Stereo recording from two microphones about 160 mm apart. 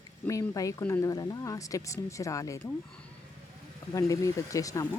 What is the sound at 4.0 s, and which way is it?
Speech, 20° left (ahead or behind).